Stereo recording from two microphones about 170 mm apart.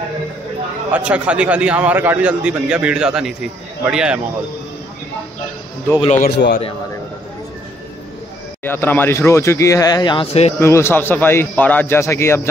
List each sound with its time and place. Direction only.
0.9 s a man's voice: 5° right (ahead or behind)
6.1 s a man's voice: 70° left (ahead or behind)
8.6 s speech: 10° left (ahead or behind); by 10.5 s 35° left (ahead or behind)
10.6 s speech: 15° left (ahead or behind)